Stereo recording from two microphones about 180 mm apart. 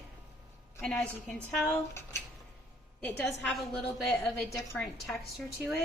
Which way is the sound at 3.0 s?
5° left (ahead or behind).